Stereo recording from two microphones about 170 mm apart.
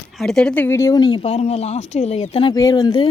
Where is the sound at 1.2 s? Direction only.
40° left (ahead or behind).